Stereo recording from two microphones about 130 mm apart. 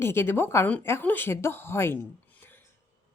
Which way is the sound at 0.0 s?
20° left (ahead or behind).